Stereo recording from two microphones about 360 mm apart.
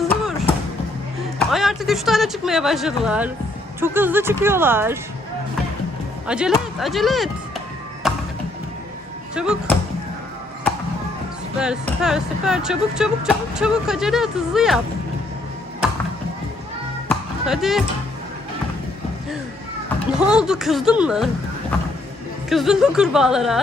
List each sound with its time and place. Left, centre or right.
0.0 s music: centre
1.4 s speech: centre
6.2 s speech: centre
8.0 s music: centre
9.3 s speech: centre
11.6 s speech: centre
17.1 s basketball bounce: centre
20.1 s speech: centre
22.4 s speech: centre